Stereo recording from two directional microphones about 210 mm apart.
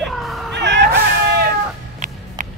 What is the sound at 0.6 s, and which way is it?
Music, 55° right (ahead or behind).